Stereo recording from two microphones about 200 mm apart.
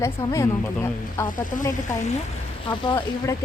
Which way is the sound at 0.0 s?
15° left (ahead or behind).